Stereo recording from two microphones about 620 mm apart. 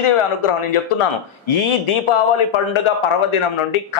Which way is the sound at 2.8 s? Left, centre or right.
Left.